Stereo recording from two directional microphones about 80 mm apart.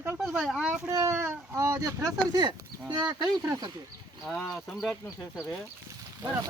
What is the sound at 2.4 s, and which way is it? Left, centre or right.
Speech, right.